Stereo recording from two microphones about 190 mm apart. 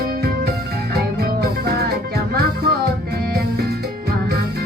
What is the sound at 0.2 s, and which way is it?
Music, 55° right (ahead or behind).